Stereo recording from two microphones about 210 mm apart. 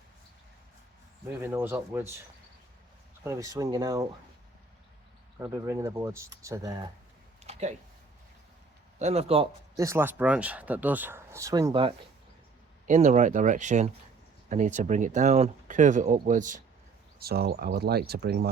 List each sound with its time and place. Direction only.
1.3 s speech: 10° right (ahead or behind)
3.2 s speech: 15° right (ahead or behind)
5.4 s speech: 15° right (ahead or behind)
7.4 s a sound: 30° right (ahead or behind)
9.0 s speech: 30° right (ahead or behind)
9.7 s speech: 15° right (ahead or behind)
12.9 s speech: 35° right (ahead or behind); by 18.3 s 50° right (ahead or behind)